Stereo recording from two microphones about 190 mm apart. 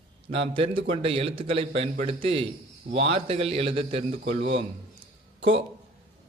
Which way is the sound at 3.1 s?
30° right (ahead or behind).